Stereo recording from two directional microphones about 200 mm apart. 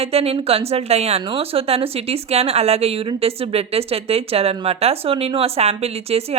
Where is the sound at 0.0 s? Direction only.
30° right (ahead or behind).